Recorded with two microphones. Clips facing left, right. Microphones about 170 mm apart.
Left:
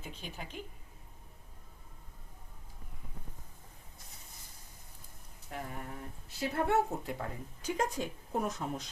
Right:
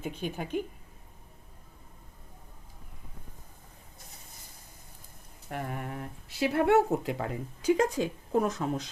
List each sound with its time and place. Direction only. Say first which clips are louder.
0.0 s a woman's voice: right 10 dB; 55° right (ahead or behind)
5.5 s speech: right 6 dB; 65° right (ahead or behind); by 8.9 s 90° right